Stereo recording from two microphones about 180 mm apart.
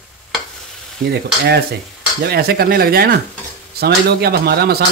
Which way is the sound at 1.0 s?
65° right (ahead or behind).